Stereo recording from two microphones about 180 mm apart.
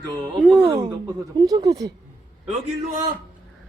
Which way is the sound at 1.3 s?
20° right (ahead or behind).